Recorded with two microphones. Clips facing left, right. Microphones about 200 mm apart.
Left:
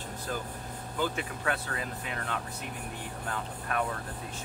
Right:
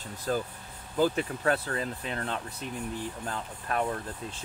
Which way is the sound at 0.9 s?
35° right (ahead or behind).